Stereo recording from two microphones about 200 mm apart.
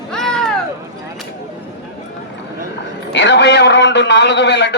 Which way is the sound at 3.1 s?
60° left (ahead or behind).